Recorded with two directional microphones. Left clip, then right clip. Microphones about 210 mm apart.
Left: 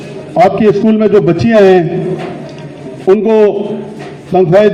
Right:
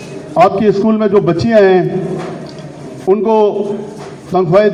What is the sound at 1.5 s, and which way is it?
Speech, 55° left (ahead or behind).